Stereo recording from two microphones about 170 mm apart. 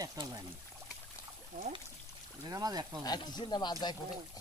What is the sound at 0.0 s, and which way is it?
Speech, 20° right (ahead or behind).